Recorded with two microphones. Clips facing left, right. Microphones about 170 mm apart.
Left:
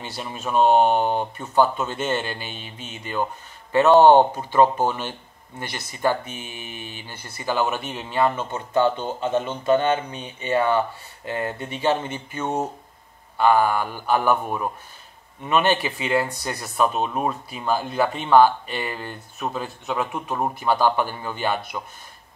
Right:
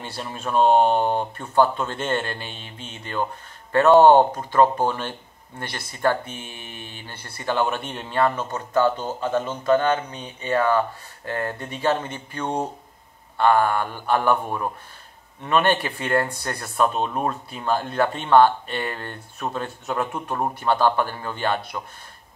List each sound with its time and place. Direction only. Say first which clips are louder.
0.0 s speech: even; 5° left (ahead or behind)
8.7 s speech: even; 25° left (ahead or behind)
10.0 s speech: even; 5° left (ahead or behind)